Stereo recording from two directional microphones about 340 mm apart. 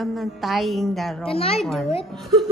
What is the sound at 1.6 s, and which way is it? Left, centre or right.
Speech, centre.